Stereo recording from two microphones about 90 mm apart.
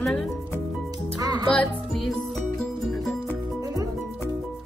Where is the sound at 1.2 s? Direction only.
45° right (ahead or behind).